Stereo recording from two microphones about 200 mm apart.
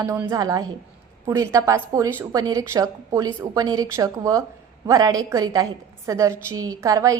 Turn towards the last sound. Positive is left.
turn(degrees=-15)  # may be behind; listen again after turning